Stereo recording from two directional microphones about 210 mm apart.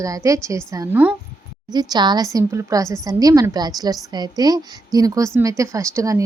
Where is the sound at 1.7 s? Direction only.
20° right (ahead or behind).